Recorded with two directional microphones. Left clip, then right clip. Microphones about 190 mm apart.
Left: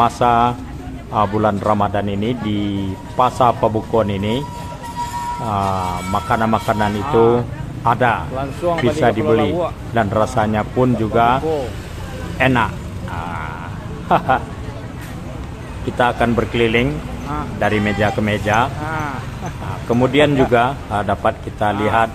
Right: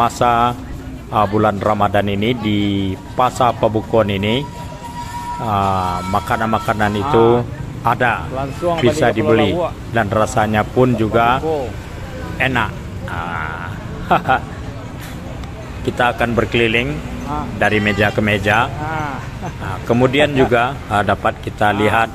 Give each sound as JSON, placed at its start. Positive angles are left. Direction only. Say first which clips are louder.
{"t": 0.0, "sound": "speech", "louder": "even", "side_deg": -5}
{"t": 5.5, "sound": "speech", "louder": "right 4 dB", "side_deg": -5}
{"t": 7.1, "sound": "speech", "louder": "right 1 dB", "side_deg": -20}
{"t": 7.8, "sound": "speech", "louder": "even", "side_deg": -5}
{"t": 12.4, "sound": "a sound", "louder": "left 2 dB", "side_deg": -5}
{"t": 14.0, "sound": "speech", "louder": "right 1 dB", "side_deg": 0}
{"t": 15.8, "sound": "speech", "louder": "even", "side_deg": 0}